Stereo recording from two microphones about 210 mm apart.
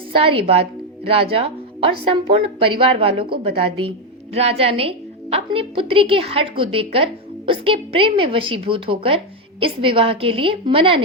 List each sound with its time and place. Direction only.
0.2 s a woman's voice: 25° right (ahead or behind)
4.4 s a woman's voice: 30° right (ahead or behind)